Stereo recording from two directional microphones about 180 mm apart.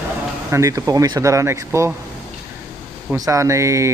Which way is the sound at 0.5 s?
15° right (ahead or behind).